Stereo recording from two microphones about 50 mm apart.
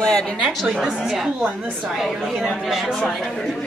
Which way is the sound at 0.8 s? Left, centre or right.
Centre.